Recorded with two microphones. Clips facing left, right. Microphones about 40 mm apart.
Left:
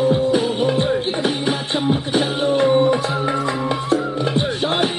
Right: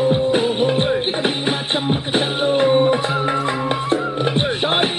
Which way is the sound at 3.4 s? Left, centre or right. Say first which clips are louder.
Even; right.